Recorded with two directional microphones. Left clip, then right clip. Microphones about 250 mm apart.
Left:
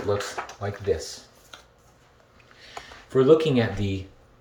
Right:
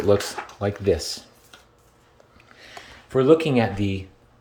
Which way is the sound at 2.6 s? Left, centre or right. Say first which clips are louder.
Left 1 dB; centre.